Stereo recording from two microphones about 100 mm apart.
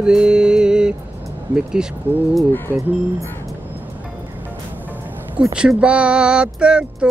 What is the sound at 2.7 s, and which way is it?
Speech, 15° left (ahead or behind).